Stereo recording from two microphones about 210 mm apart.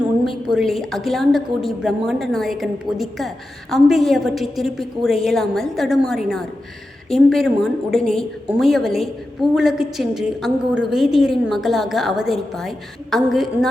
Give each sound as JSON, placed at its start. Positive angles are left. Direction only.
{"t": 0.5, "sound": "a woman's voice", "side_deg": 0}